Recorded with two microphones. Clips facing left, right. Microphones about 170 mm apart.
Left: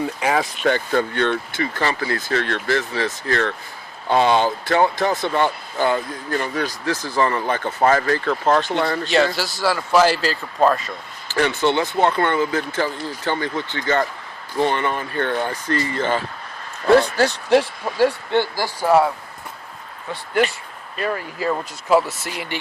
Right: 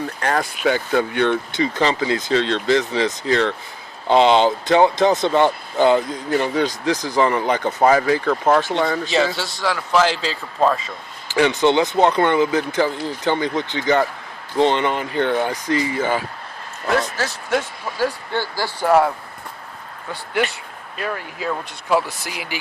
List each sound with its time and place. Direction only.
0.0 s speech: 5° left (ahead or behind)
0.5 s speech: 5° right (ahead or behind)
8.7 s a man's voice: centre (ahead or behind)
11.3 s speech: 15° right (ahead or behind)
16.8 s speech: 30° left (ahead or behind); by 18.9 s 15° left (ahead or behind)
20.3 s a man's voice: centre (ahead or behind)